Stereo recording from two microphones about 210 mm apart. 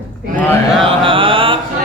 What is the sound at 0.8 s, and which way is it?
Mantra, 25° right (ahead or behind).